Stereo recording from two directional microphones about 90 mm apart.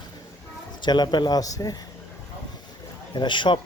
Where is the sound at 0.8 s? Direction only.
55° left (ahead or behind).